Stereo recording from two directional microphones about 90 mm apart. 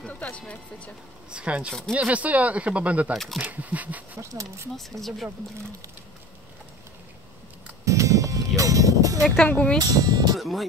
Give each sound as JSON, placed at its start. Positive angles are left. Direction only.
{"t": 0.0, "sound": "speech", "side_deg": 15}
{"t": 1.3, "sound": "speech", "side_deg": -15}
{"t": 1.7, "sound": "speech", "side_deg": 0}
{"t": 2.0, "sound": "speech", "side_deg": -15}
{"t": 3.1, "sound": "speech", "side_deg": 0}
{"t": 3.3, "sound": "speech", "side_deg": -20}
{"t": 4.2, "sound": "speech", "side_deg": -35}
{"t": 4.7, "sound": "speech", "side_deg": 0}
{"t": 7.8, "sound": "music", "side_deg": -35}
{"t": 9.5, "sound": "speech", "side_deg": 15}
{"t": 9.8, "sound": "speech", "side_deg": -50}
{"t": 10.3, "sound": "speech", "side_deg": 0}